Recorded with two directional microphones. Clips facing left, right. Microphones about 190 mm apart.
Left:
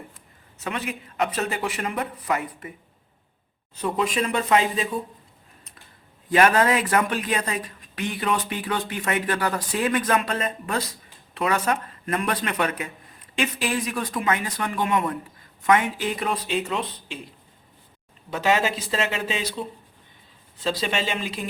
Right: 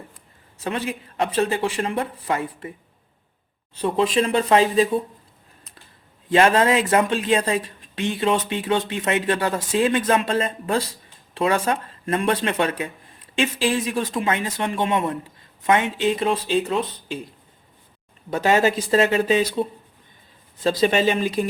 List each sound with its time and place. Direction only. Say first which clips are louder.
0.6 s speech: right 4 dB; 30° right (ahead or behind)
3.8 s speech: right 4 dB; 30° right (ahead or behind)
6.2 s speech: right 2 dB; 25° right (ahead or behind)
18.3 s speech: right 4 dB; 45° right (ahead or behind)
20.7 s speech: right 7 dB; 45° right (ahead or behind)